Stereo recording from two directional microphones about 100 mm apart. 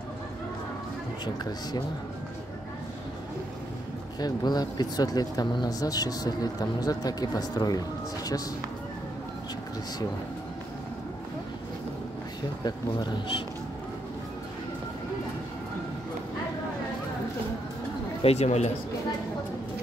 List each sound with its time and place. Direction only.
1.2 s speech: 45° left (ahead or behind)
4.2 s speech: 40° left (ahead or behind)
12.6 s speech: 45° left (ahead or behind)
18.2 s speech: 90° left